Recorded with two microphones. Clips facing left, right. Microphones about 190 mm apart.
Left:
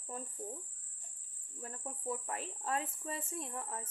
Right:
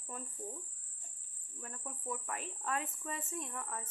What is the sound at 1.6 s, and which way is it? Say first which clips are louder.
Speech: left 3 dB; 30° left (ahead or behind).